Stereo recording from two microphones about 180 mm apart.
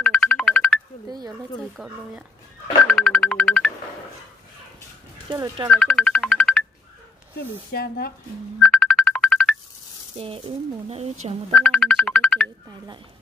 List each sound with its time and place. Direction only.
0.0 s music: 5° left (ahead or behind)
1.8 s speech: centre (ahead or behind)
2.9 s music: 5° left (ahead or behind)
5.3 s speech: 25° right (ahead or behind)
5.7 s speech: 5° left (ahead or behind)
7.7 s speech: 60° left (ahead or behind)
8.6 s ringtone: centre (ahead or behind)
10.1 s speech: 30° right (ahead or behind)
11.5 s ringtone: 5° left (ahead or behind)